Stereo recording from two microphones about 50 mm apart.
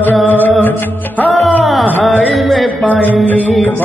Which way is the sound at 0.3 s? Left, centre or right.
Left.